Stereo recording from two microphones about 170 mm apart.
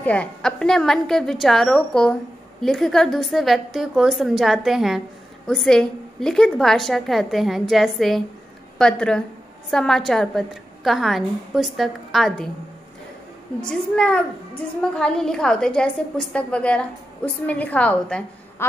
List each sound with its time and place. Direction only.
0.0 s a woman's voice: 10° left (ahead or behind)
13.6 s a woman's voice: 5° left (ahead or behind)